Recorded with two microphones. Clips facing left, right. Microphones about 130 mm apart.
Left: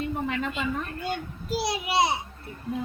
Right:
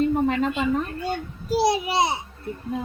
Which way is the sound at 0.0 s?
35° right (ahead or behind).